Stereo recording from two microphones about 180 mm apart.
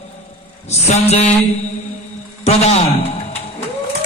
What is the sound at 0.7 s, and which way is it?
Speech, 35° left (ahead or behind).